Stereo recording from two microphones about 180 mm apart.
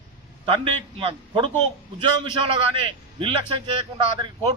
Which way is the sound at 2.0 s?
25° right (ahead or behind).